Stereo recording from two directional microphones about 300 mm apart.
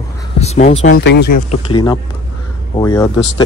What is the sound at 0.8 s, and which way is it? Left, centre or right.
Speech, left.